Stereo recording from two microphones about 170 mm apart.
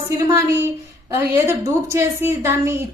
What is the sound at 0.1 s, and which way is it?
A woman's voice, 15° right (ahead or behind).